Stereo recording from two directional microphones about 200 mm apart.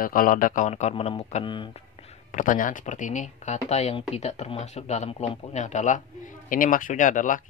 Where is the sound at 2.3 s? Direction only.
40° left (ahead or behind).